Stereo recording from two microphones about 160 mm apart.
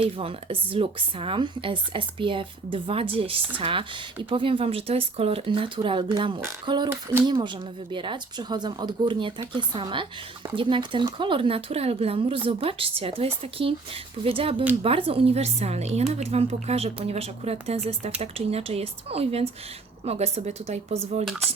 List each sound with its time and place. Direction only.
0.0 s speech: 35° right (ahead or behind)
6.9 s speech: 15° right (ahead or behind)
7.3 s speech: 30° right (ahead or behind)